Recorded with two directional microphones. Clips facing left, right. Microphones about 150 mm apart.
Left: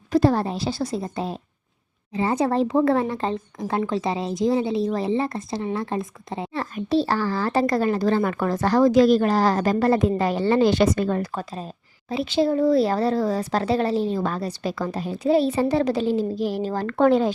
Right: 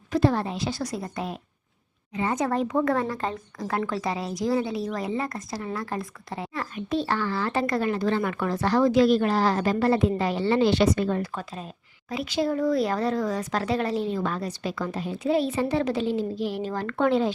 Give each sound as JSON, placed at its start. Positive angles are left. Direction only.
{"t": 0.1, "sound": "speech", "side_deg": 35}